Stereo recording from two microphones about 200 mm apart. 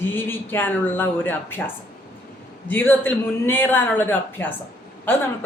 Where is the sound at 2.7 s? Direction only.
10° left (ahead or behind).